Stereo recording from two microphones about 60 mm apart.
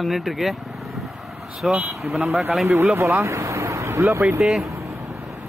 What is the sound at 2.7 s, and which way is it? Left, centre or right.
Speech, right.